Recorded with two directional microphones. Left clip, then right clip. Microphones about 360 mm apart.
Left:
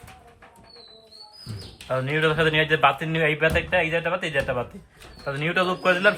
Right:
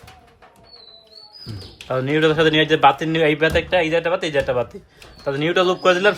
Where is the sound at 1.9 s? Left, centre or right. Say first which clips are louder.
Right 5 dB; right.